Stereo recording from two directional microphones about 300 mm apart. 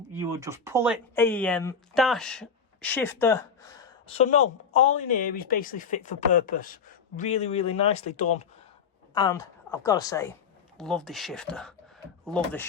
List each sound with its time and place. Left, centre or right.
0.1 s speech: centre
1.1 s speech: centre; by 8.4 s left
9.1 s speech: centre